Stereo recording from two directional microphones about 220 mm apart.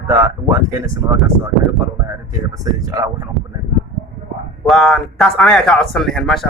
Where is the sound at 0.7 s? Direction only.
15° right (ahead or behind).